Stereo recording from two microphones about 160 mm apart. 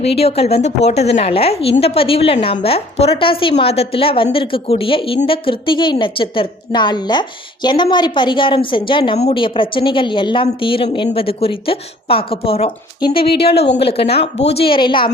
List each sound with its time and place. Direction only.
0.0 s a woman's voice: 40° left (ahead or behind)
13.2 s speech: 80° left
13.8 s a woman's voice: 35° left (ahead or behind)